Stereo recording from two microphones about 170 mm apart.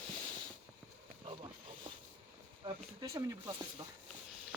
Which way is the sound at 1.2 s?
35° right (ahead or behind).